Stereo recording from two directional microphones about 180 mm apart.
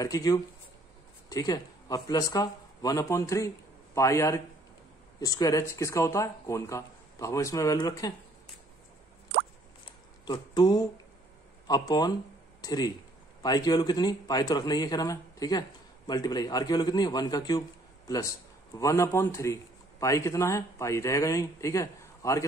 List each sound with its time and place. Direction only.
0.0 s a man's voice: 20° left (ahead or behind)
9.8 s a sound: 25° left (ahead or behind)
11.6 s a man's voice: 20° left (ahead or behind)